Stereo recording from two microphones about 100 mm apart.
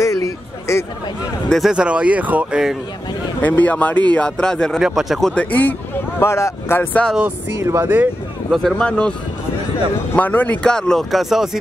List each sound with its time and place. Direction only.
0.0 s a sound: 30° left (ahead or behind)
1.7 s speech: 10° right (ahead or behind)
3.4 s speech: 15° left (ahead or behind); by 5.3 s centre (ahead or behind)
5.3 s speech: 15° left (ahead or behind)
7.6 s speech: 25° right (ahead or behind)
8.7 s speech: 10° left (ahead or behind)
10.1 s speech: 15° left (ahead or behind); by 11.5 s 5° right (ahead or behind)